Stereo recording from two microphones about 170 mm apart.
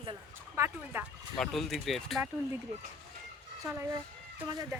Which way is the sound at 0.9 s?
10° right (ahead or behind).